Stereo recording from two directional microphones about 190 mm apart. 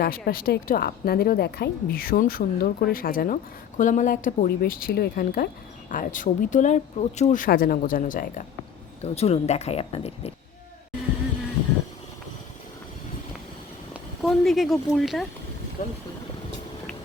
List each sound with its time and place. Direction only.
0.0 s a woman's voice: 50° left (ahead or behind)
9.0 s speech: 35° left (ahead or behind)
13.9 s speech: centre (ahead or behind)
15.8 s a woman's voice: 45° left (ahead or behind)